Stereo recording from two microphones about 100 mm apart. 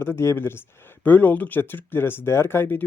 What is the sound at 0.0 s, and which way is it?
Speech, 25° left (ahead or behind).